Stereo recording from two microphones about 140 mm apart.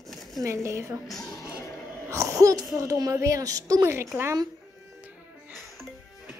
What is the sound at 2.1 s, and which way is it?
A woman's voice, 25° right (ahead or behind).